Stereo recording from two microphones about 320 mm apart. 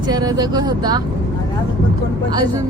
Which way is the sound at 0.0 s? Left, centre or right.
Centre.